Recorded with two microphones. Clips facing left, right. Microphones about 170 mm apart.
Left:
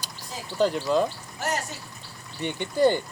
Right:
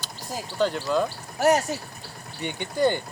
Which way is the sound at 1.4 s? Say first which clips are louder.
Right 9 dB; 70° right (ahead or behind).